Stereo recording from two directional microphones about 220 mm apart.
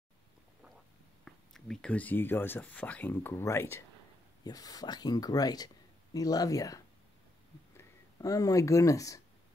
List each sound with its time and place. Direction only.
1.2 s speech: centre (ahead or behind)